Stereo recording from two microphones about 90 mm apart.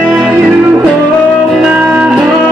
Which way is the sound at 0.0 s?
15° right (ahead or behind).